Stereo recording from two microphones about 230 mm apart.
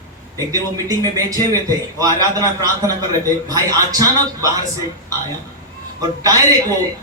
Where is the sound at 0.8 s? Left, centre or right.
Centre.